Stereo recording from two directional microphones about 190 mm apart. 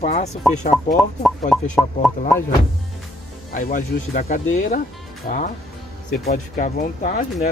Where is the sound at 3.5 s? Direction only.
50° left (ahead or behind).